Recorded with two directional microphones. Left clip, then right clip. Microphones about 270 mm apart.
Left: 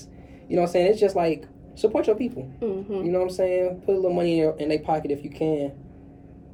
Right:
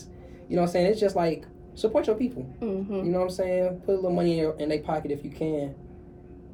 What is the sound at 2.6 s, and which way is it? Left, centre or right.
Speech, centre.